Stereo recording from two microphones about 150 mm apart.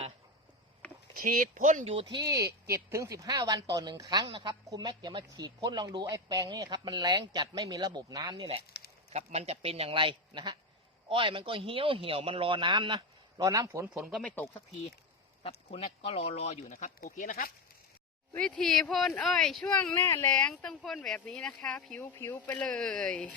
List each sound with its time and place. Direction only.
1.1 s speech: 70° right (ahead or behind)
1.8 s a man's voice: 40° right (ahead or behind)
9.0 s a man's voice: 45° right (ahead or behind); by 14.4 s 5° left (ahead or behind)
15.4 s speech: 40° left (ahead or behind)
16.7 s speech: 65° left (ahead or behind)
18.3 s speech: 5° left (ahead or behind)
20.0 s speech: 15° left (ahead or behind)
22.1 s speech: 15° left (ahead or behind)